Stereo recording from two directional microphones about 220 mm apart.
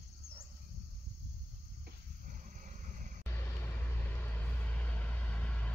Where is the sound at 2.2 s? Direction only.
35° right (ahead or behind).